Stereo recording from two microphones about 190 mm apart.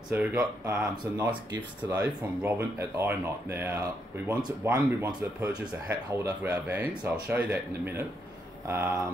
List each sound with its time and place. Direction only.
0.1 s speech: 15° right (ahead or behind)